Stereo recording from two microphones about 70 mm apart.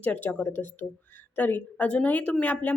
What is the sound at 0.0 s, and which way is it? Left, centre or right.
A woman's voice, left.